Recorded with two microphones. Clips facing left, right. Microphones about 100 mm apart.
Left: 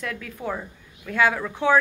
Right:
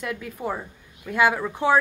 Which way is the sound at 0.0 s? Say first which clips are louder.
Right 1 dB; 10° right (ahead or behind).